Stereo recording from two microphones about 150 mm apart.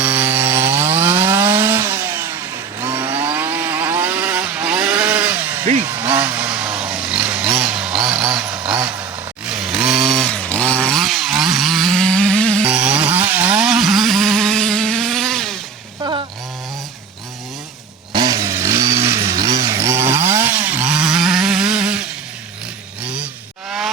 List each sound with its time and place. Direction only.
0.0 s chainsaw: 10° right (ahead or behind); by 12.6 s 5° left (ahead or behind)
12.6 s chainsaw: 5° right (ahead or behind)
18.1 s chainsaw: 25° right (ahead or behind); by 23.3 s 10° right (ahead or behind)